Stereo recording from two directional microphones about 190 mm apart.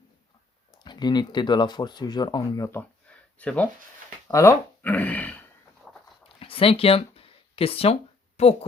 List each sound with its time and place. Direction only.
0.9 s speech: 20° left (ahead or behind)
6.2 s a sound: 30° left (ahead or behind)
8.4 s a woman's voice: 35° left (ahead or behind)